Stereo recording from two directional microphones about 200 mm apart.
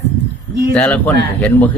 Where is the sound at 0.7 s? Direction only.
5° left (ahead or behind).